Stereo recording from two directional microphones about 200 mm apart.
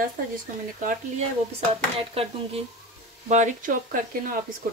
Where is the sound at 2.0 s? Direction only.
30° right (ahead or behind).